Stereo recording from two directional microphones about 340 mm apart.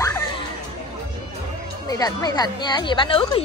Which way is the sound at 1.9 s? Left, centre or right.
Centre.